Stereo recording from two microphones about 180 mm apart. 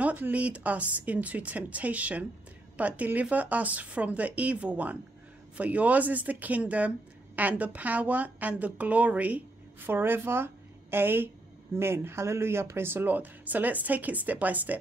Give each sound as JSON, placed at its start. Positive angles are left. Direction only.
{"t": 0.0, "sound": "a woman's voice", "side_deg": -10}